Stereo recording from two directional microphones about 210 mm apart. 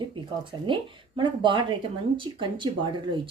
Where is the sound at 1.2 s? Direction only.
20° right (ahead or behind).